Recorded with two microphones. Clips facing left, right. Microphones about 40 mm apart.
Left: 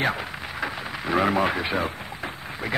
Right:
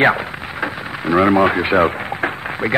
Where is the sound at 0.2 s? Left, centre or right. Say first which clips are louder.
Right 6 dB; right.